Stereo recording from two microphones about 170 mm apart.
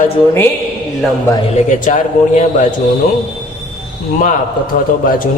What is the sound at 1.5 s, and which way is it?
Speech, 45° left (ahead or behind).